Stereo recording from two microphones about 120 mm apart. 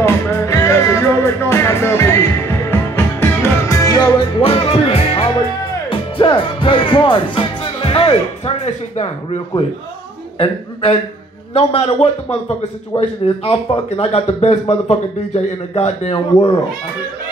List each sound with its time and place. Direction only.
0.0 s music: 20° left (ahead or behind)
4.4 s music: 50° left (ahead or behind)
10.4 s a man's voice: 50° left (ahead or behind)
13.5 s speech: 55° left (ahead or behind)